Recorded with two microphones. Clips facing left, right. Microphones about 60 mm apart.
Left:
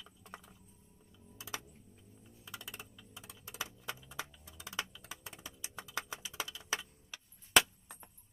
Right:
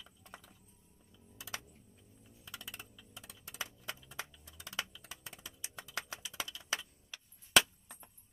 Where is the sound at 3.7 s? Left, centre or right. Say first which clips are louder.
Left 2 dB; centre.